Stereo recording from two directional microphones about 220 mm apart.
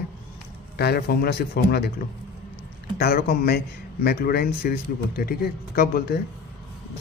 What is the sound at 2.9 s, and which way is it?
Speech, 45° left (ahead or behind).